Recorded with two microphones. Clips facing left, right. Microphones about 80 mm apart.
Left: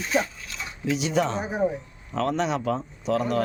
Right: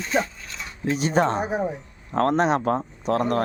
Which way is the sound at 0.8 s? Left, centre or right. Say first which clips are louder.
Right 3 dB; right.